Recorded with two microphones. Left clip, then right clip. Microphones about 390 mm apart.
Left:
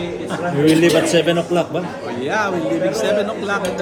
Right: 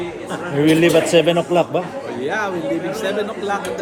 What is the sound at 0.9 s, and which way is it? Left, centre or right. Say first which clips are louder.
Speech: right 1 dB; centre.